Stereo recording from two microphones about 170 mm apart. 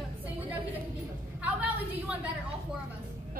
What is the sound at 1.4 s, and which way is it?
Speech, 10° right (ahead or behind).